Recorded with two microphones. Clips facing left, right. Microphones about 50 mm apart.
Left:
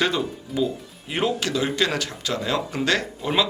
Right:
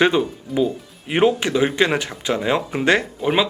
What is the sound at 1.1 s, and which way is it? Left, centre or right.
Speech, right.